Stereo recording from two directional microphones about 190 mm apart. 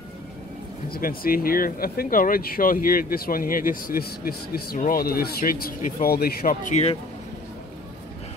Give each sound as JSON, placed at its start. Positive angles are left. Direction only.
{"t": 0.9, "sound": "speech", "side_deg": 50}